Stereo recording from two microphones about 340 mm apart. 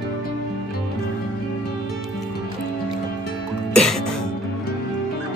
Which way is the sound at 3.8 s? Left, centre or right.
Centre.